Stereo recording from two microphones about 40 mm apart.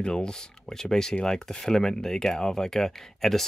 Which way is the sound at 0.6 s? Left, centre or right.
Centre.